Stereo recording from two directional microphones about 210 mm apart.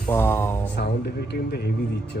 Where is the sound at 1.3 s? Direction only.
45° left (ahead or behind).